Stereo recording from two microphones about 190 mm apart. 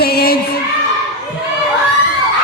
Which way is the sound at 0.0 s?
55° left (ahead or behind).